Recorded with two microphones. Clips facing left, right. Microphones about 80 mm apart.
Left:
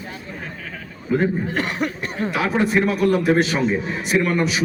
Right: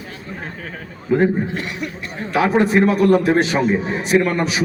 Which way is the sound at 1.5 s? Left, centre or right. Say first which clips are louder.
Left 3 dB; left.